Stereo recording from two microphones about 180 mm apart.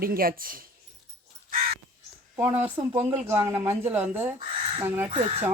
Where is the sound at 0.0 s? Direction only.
55° right (ahead or behind).